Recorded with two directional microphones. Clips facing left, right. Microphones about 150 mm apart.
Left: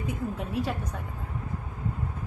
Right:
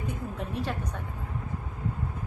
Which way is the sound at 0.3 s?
5° left (ahead or behind).